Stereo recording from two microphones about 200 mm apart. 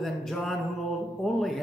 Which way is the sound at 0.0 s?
Centre (ahead or behind).